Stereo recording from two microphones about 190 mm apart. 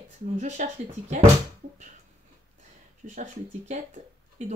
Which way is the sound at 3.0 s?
40° right (ahead or behind).